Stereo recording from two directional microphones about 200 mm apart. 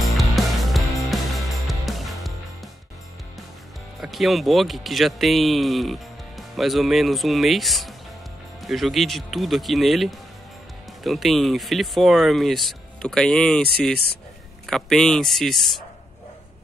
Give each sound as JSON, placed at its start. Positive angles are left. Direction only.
{"t": 0.0, "sound": "music", "side_deg": 0}
{"t": 4.0, "sound": "speech", "side_deg": 0}
{"t": 14.7, "sound": "speech", "side_deg": 0}